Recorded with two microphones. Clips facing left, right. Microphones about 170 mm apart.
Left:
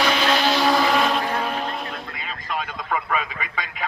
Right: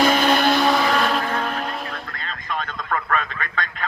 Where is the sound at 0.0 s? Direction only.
50° right (ahead or behind).